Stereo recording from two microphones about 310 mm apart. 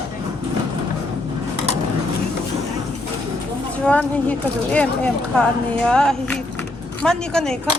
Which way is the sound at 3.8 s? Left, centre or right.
Centre.